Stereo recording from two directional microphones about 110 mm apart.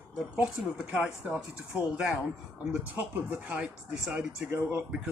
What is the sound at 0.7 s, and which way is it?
Speech, 10° right (ahead or behind).